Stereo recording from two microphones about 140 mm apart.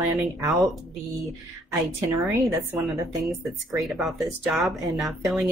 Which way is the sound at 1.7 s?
20° right (ahead or behind).